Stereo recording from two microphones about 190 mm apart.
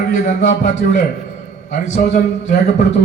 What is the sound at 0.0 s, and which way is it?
Speech, 40° left (ahead or behind).